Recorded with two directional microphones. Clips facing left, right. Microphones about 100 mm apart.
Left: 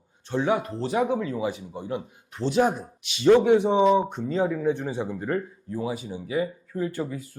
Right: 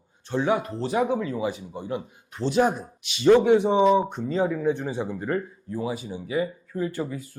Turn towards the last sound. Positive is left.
turn(degrees=-15)  # may be behind; listen again after turning